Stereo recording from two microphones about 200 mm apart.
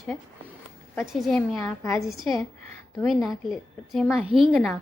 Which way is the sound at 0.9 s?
Centre (ahead or behind).